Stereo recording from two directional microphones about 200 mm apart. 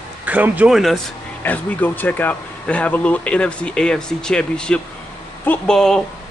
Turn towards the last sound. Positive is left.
turn(degrees=5)  # may be behind; listen again after turning